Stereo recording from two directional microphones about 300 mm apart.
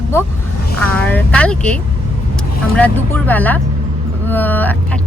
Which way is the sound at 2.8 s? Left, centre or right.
Centre.